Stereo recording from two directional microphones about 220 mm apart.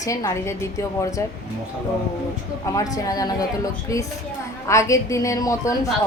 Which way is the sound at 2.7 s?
15° left (ahead or behind).